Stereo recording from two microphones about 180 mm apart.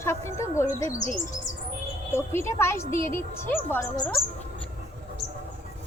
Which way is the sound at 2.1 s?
15° left (ahead or behind).